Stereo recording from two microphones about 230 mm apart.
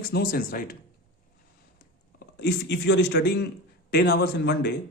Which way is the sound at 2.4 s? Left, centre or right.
Left.